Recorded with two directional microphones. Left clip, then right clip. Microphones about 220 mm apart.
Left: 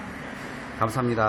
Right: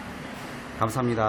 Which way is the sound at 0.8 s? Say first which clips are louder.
Left 1 dB; centre (ahead or behind).